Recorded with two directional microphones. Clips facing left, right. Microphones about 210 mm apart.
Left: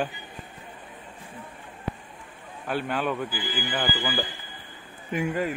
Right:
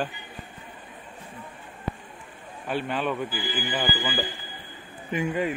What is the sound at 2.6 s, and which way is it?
A man's voice, centre (ahead or behind).